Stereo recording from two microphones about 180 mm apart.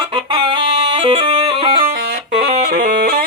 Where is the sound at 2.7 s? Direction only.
60° right (ahead or behind).